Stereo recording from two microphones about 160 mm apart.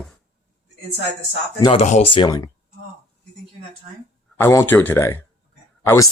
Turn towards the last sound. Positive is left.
turn(degrees=15)  # may be behind; listen again after turning